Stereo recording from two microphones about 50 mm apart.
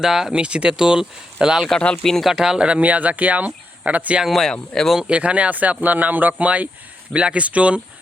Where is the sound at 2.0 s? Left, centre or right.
Centre.